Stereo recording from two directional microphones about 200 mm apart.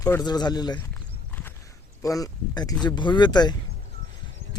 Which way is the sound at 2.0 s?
15° left (ahead or behind).